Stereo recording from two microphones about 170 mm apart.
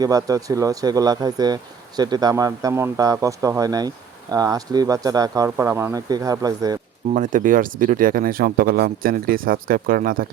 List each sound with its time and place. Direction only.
0.0 s speech: 20° right (ahead or behind)
7.1 s speech: 50° right (ahead or behind)